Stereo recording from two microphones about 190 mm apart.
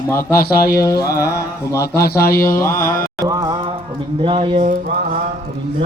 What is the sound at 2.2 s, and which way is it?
Speech, 50° left (ahead or behind).